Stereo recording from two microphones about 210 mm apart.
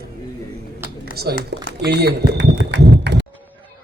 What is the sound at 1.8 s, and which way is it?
Speech, 50° right (ahead or behind).